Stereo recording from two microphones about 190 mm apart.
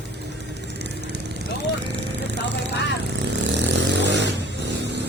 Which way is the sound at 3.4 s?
65° right (ahead or behind).